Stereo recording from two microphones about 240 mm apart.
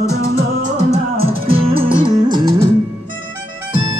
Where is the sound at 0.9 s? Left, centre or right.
Right.